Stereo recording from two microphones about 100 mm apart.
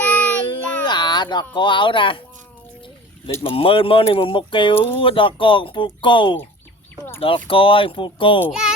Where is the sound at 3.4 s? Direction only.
65° left (ahead or behind).